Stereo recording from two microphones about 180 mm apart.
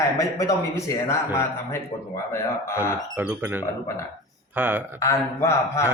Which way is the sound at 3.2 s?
10° right (ahead or behind).